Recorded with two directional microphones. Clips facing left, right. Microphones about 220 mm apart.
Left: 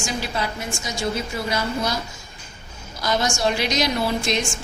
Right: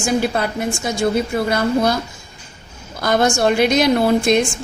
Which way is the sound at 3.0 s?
55° right (ahead or behind).